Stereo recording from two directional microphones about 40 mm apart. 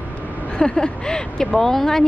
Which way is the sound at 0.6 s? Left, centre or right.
Centre.